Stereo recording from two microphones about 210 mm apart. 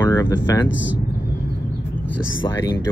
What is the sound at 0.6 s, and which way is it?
Speech, 60° left (ahead or behind).